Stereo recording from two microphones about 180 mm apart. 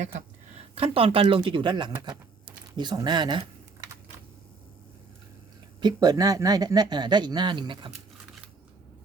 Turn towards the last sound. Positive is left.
turn(degrees=-25)  # may be behind; listen again after turning